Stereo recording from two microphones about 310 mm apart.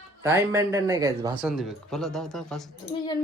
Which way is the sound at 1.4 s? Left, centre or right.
Centre.